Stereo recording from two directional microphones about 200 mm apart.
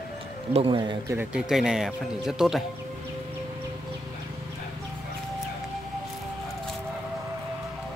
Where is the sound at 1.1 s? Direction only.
5° right (ahead or behind).